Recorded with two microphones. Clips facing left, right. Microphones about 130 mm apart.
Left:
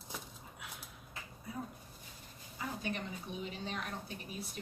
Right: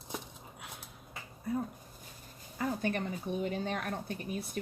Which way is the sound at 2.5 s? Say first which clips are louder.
Right 7 dB; 55° right (ahead or behind).